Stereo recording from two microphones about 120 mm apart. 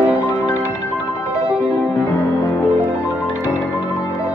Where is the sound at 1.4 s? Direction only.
5° right (ahead or behind).